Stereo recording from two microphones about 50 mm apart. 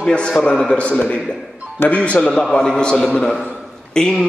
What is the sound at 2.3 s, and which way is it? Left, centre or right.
A man's voice, centre.